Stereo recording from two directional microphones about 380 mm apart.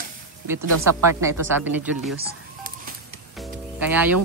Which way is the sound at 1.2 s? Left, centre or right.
Centre.